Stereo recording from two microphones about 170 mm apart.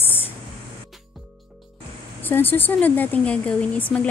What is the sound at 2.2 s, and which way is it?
Speech, 10° left (ahead or behind).